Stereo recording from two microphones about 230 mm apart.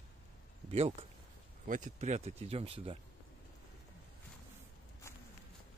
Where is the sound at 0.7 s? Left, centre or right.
Right.